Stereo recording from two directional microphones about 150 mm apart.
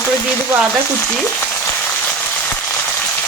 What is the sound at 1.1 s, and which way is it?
Frying, 10° left (ahead or behind).